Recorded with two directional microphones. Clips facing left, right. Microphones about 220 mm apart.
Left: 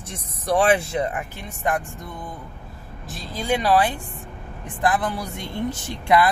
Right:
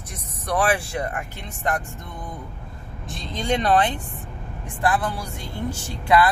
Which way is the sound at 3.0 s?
5° left (ahead or behind).